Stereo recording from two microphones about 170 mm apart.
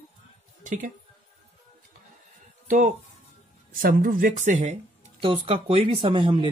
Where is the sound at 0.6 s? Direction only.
45° right (ahead or behind).